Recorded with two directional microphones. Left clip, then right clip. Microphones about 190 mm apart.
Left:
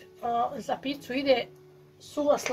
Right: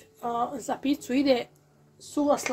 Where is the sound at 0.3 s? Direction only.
45° right (ahead or behind).